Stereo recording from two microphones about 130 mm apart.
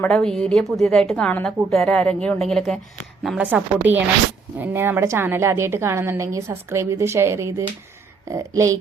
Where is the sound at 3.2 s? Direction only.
10° right (ahead or behind).